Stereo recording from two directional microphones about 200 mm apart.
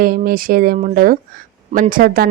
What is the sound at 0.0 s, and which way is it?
Speech, 45° right (ahead or behind).